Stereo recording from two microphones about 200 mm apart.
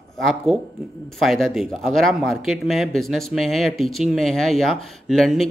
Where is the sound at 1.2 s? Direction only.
Centre (ahead or behind).